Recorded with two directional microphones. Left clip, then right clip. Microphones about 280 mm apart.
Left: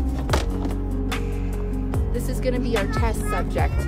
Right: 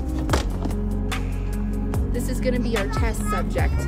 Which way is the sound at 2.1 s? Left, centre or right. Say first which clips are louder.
Even; centre.